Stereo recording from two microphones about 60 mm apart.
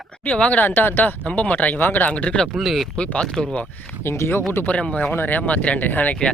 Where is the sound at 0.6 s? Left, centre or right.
Left.